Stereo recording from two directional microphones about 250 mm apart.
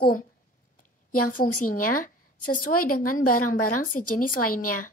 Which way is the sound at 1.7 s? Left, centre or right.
Left.